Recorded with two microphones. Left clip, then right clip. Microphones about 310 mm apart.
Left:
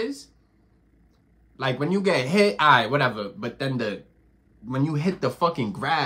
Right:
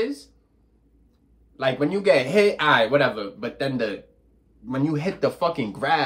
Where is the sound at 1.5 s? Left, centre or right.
Centre.